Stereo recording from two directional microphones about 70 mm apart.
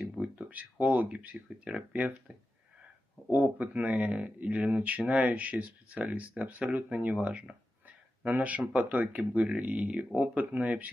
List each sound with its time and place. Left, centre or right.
0.0 s speech: right
3.3 s speech: right